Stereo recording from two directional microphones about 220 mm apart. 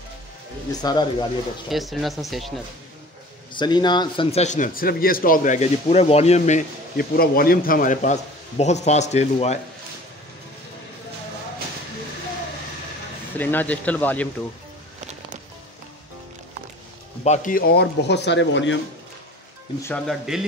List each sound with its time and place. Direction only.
0.7 s speech: 20° left (ahead or behind)
1.7 s speech: centre (ahead or behind)
3.5 s speech: 20° left (ahead or behind)
13.4 s speech: 10° left (ahead or behind)
17.2 s speech: 35° left (ahead or behind); by 18.8 s 55° left (ahead or behind)
19.8 s speech: 5° left (ahead or behind)